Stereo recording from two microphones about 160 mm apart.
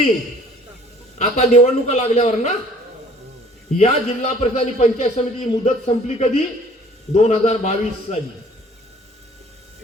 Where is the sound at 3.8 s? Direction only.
40° left (ahead or behind).